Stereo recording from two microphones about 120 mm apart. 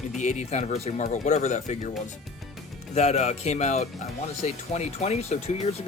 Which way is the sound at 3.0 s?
65° left (ahead or behind).